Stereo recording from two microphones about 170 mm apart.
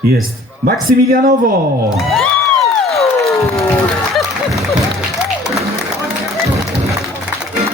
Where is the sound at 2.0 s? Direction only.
Centre (ahead or behind).